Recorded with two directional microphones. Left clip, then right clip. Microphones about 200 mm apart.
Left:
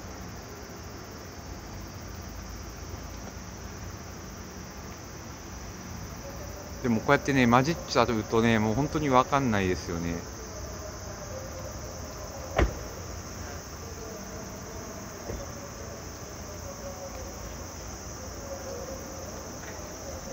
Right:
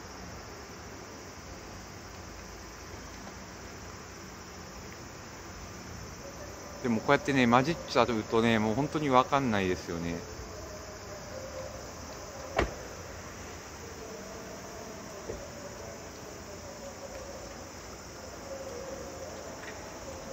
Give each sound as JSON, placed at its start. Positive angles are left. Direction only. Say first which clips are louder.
{"t": 6.8, "sound": "speech", "louder": "left 2 dB", "side_deg": -5}
{"t": 12.6, "sound": "vehicle", "louder": "left 2 dB", "side_deg": 35}